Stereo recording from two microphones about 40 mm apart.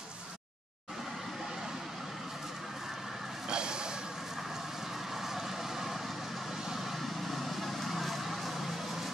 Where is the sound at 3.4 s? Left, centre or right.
Right.